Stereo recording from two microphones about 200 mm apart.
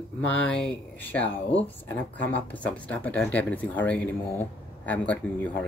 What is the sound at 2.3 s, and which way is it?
Speech, 10° left (ahead or behind).